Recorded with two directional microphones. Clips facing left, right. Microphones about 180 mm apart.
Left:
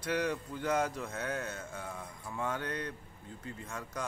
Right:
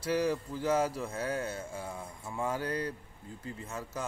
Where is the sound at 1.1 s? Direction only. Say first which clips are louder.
Right 3 dB; 30° right (ahead or behind).